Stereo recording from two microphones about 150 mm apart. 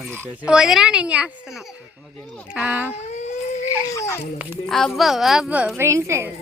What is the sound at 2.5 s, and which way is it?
Speech, 10° right (ahead or behind).